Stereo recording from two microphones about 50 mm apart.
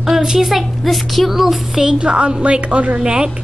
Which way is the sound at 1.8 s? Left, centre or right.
Centre.